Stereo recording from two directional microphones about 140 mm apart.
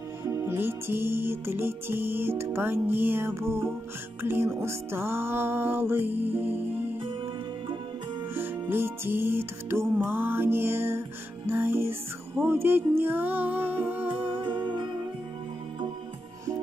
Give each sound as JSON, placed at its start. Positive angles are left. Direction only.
{"t": 0.2, "sound": "music", "side_deg": -20}
{"t": 8.4, "sound": "music", "side_deg": -15}
{"t": 14.3, "sound": "music", "side_deg": -35}